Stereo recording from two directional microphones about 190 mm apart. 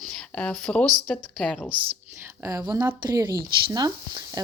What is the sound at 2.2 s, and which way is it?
Speech, 15° right (ahead or behind).